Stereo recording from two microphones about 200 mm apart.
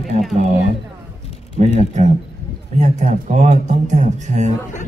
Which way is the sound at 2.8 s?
35° right (ahead or behind).